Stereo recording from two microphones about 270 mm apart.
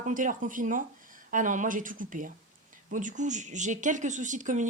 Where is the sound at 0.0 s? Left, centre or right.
Right.